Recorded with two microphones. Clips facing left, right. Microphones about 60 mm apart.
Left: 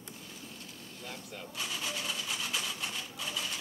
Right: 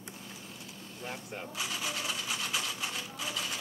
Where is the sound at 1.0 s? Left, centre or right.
Right.